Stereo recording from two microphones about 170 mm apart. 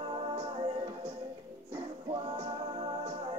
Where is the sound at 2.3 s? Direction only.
35° right (ahead or behind).